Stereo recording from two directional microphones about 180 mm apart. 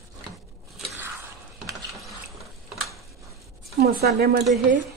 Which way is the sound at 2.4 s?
Centre (ahead or behind).